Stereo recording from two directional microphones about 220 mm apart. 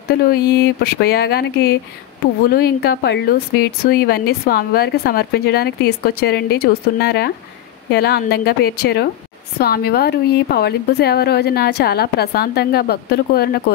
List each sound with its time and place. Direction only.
0.1 s a woman's voice: 45° left (ahead or behind)